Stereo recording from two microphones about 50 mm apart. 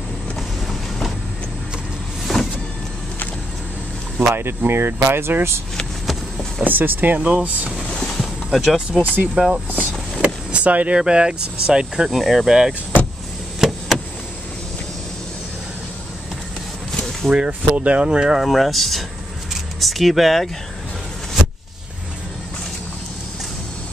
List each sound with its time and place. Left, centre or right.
2.3 s power windows: centre
4.2 s speech: right
6.6 s speech: right
7.2 s speech: right
7.9 s boat: centre
8.2 s vehicle: centre
9.0 s speech: right
9.7 s speech: right
11.0 s speech: centre
12.1 s speech: centre
13.6 s a sound: centre
17.3 s speech: right
18.4 s speech: centre